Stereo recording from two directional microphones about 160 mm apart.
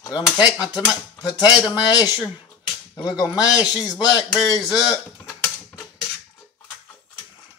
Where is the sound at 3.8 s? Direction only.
20° left (ahead or behind).